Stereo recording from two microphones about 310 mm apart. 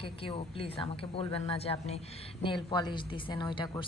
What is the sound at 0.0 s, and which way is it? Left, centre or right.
A woman's voice, centre.